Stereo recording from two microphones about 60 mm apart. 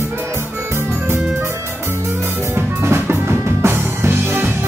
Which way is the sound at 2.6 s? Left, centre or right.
Right.